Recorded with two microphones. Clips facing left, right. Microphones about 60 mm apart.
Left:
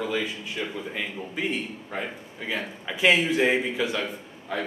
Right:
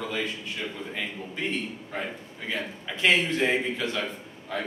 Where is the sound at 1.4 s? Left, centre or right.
Centre.